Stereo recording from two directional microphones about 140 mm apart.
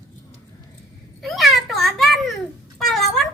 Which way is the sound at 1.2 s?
Centre (ahead or behind).